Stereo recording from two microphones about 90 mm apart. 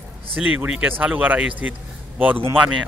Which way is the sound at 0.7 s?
20° right (ahead or behind).